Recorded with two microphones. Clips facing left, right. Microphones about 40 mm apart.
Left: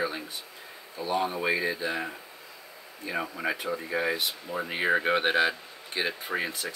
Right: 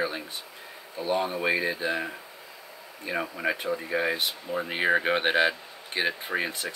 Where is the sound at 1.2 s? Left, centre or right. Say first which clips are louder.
Right 1 dB; centre.